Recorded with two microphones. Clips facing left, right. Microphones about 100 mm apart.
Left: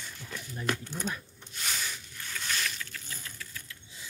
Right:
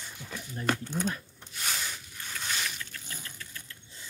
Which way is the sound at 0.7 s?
15° right (ahead or behind).